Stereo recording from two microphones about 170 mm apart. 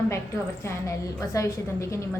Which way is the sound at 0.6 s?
20° left (ahead or behind).